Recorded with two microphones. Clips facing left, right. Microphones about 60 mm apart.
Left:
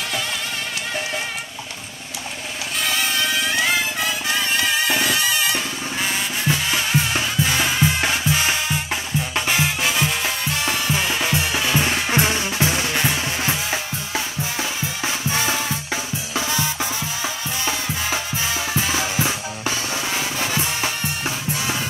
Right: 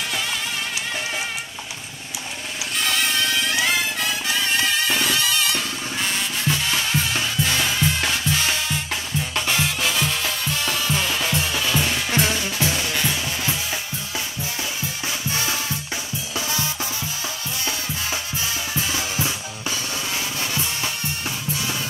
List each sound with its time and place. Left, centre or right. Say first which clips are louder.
2.8 s music: even; centre; by 14.7 s left
16.3 s music: left 3 dB; left
18.7 s drum: left 4 dB; left
18.9 s drum kit: left 3 dB; left
20.2 s music: left 3 dB; left